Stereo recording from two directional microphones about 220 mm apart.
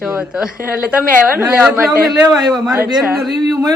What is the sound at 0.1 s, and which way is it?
A man's voice, 5° right (ahead or behind).